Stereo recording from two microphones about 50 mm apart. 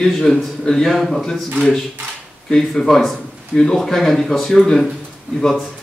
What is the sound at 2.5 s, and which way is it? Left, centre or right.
Speech, centre.